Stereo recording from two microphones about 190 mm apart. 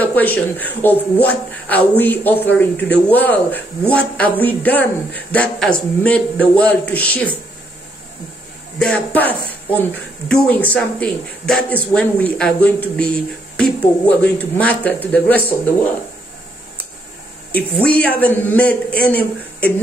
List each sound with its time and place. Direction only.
0.0 s speech: 10° left (ahead or behind)
8.7 s speech: 5° left (ahead or behind)
17.8 s speech: 5° left (ahead or behind)